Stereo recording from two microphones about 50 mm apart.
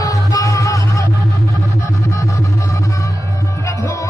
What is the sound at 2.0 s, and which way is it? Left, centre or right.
Music, left.